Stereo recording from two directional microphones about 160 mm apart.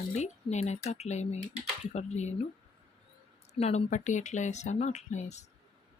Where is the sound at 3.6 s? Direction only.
45° left (ahead or behind).